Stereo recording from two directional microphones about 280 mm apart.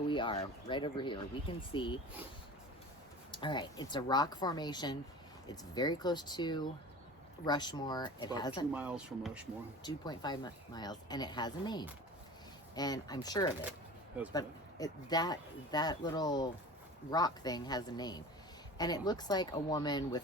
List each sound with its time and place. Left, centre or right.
0.1 s speech: centre
3.3 s speech: centre
8.7 s speech: centre
9.8 s speech: centre